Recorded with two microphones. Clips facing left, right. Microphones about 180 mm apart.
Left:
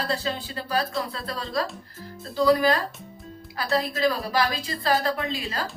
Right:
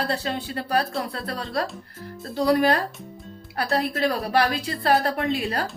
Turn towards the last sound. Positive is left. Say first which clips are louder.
# right 5 dB
turn(degrees=-60)  # may be behind; listen again after turning